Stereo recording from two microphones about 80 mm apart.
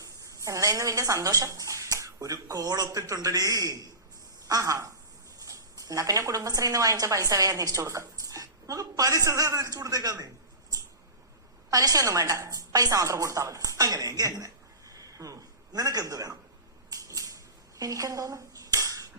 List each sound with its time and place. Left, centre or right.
0.0 s a woman's voice: right
11.7 s a woman's voice: right
16.9 s dishes: right